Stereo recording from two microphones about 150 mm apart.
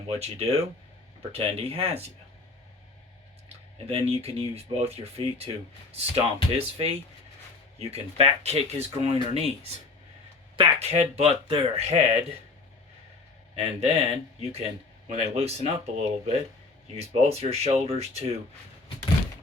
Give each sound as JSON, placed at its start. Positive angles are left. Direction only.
{"t": 0.1, "sound": "speech", "side_deg": -40}
{"t": 3.8, "sound": "speech", "side_deg": -40}
{"t": 13.6, "sound": "speech", "side_deg": -45}